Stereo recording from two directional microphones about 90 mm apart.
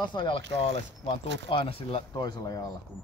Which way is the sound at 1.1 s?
90° left.